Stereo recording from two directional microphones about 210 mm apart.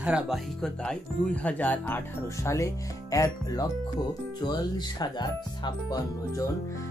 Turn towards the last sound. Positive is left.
turn(degrees=20)  # may be behind; listen again after turning